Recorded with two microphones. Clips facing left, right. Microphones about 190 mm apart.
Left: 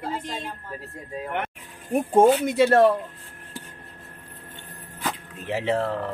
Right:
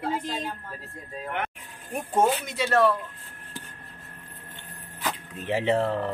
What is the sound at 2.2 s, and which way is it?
Speech, 55° left (ahead or behind).